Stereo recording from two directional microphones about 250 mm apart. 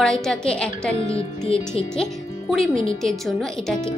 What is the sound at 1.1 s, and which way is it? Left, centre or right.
Speech, left.